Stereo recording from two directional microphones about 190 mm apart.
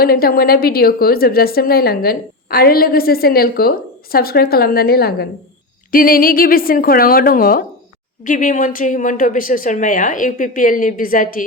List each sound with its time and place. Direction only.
0.0 s a woman's voice: 50° left (ahead or behind)